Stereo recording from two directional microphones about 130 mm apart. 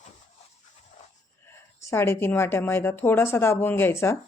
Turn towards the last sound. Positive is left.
turn(degrees=20)  # may be behind; listen again after turning